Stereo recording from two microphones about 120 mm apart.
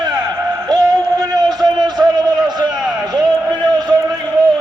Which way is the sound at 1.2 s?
35° right (ahead or behind).